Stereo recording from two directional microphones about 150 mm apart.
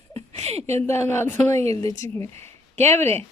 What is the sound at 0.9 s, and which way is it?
A woman's voice, 15° left (ahead or behind).